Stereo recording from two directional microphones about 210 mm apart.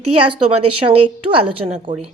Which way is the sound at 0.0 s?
90° right.